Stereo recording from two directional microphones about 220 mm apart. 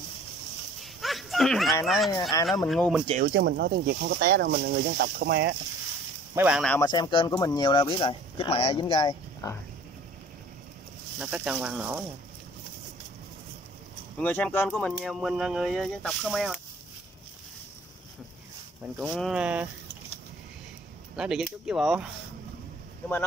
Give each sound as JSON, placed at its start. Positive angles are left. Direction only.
{"t": 1.0, "sound": "a sound", "side_deg": 0}
{"t": 1.9, "sound": "speech", "side_deg": 0}
{"t": 3.2, "sound": "speech", "side_deg": -50}
{"t": 6.3, "sound": "speech", "side_deg": -5}
{"t": 6.7, "sound": "speech", "side_deg": 15}
{"t": 11.1, "sound": "speech", "side_deg": -5}
{"t": 14.1, "sound": "speech", "side_deg": 5}
{"t": 18.9, "sound": "speech", "side_deg": 0}
{"t": 21.2, "sound": "speech", "side_deg": -5}